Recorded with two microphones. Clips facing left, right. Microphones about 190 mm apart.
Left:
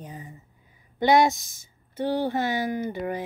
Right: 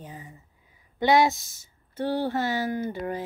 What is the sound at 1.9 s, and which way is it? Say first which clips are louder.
Speech: left 1 dB; 15° left (ahead or behind).